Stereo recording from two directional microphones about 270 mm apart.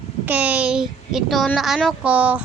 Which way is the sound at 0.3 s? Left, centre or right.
Centre.